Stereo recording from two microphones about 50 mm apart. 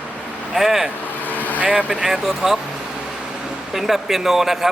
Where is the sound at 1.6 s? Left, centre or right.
Right.